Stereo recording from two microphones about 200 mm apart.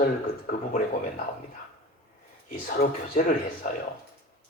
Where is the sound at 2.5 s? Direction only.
45° left (ahead or behind).